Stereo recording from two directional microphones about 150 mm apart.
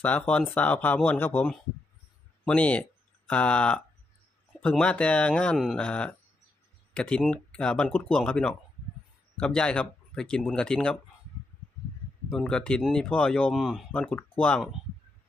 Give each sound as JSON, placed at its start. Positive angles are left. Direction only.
{"t": 0.0, "sound": "speech", "side_deg": 10}
{"t": 12.3, "sound": "speech", "side_deg": 5}
{"t": 13.9, "sound": "speech", "side_deg": 5}